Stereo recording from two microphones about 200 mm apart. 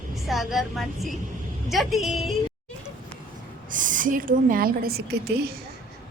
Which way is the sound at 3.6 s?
40° right (ahead or behind).